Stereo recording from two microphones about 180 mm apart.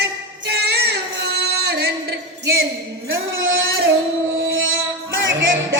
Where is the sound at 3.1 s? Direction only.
90° right.